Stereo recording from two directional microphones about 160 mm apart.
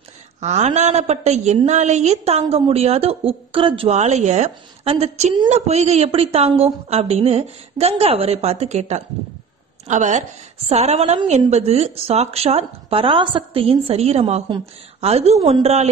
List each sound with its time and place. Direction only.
0.4 s a woman's voice: 45° right (ahead or behind)